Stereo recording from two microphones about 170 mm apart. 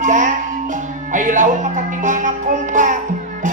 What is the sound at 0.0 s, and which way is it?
Music, 45° right (ahead or behind).